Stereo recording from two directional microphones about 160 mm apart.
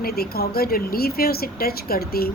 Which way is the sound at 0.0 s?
75° left (ahead or behind).